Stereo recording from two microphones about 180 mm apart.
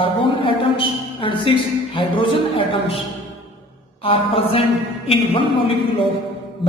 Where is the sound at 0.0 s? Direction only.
30° left (ahead or behind).